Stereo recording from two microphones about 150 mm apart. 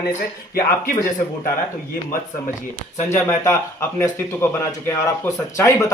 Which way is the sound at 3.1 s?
20° left (ahead or behind).